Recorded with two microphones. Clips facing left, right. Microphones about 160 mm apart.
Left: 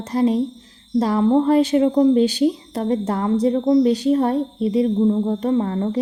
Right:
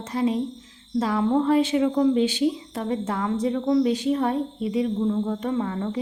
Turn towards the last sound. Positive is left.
turn(degrees=40)  # may be behind; listen again after turning